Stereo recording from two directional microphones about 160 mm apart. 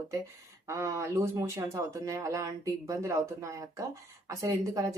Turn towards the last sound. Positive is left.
turn(degrees=-20)  # may be behind; listen again after turning